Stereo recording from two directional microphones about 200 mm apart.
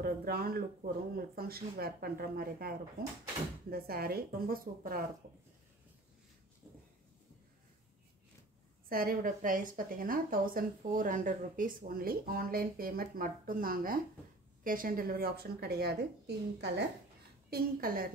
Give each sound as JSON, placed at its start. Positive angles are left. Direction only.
{"t": 0.0, "sound": "a woman's voice", "side_deg": -50}
{"t": 8.8, "sound": "a woman's voice", "side_deg": -45}